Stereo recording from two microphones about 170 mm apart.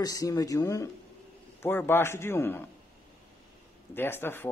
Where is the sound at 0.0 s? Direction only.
20° left (ahead or behind).